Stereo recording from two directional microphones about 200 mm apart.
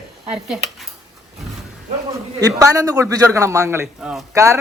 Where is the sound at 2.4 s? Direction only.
15° right (ahead or behind).